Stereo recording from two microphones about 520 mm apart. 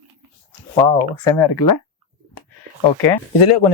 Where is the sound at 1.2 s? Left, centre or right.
Left.